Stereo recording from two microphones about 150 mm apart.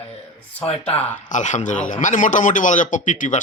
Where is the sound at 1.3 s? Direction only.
55° left (ahead or behind).